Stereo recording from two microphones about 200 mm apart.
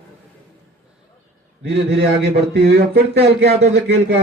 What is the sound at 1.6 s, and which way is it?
Speech, 55° right (ahead or behind).